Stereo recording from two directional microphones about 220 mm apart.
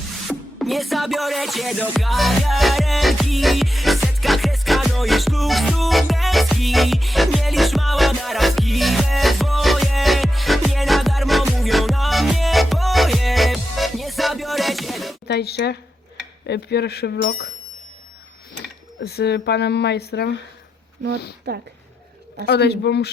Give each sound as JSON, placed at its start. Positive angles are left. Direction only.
{"t": 0.3, "sound": "music", "side_deg": 0}
{"t": 15.3, "sound": "speech", "side_deg": 50}
{"t": 18.9, "sound": "speech", "side_deg": 45}
{"t": 21.5, "sound": "speech", "side_deg": -50}
{"t": 22.4, "sound": "speech", "side_deg": 50}